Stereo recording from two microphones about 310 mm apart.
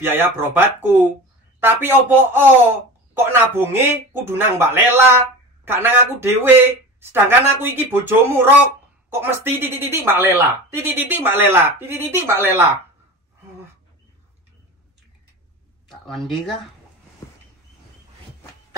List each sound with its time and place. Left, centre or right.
0.0 s speech: centre
15.9 s speech: centre